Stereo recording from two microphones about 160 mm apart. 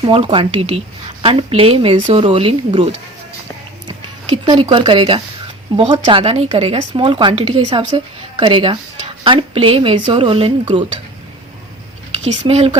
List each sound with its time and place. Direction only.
0.0 s speech: 35° right (ahead or behind)
3.8 s speech: 25° right (ahead or behind)
12.2 s speech: 45° right (ahead or behind)